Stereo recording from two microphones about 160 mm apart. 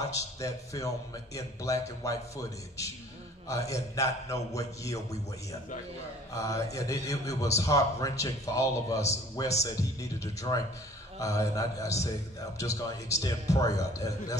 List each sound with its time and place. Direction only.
0.1 s a man's voice: 20° left (ahead or behind)